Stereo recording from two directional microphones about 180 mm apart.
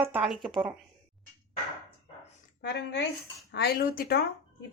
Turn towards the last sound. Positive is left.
turn(degrees=55)  # may be behind; listen again after turning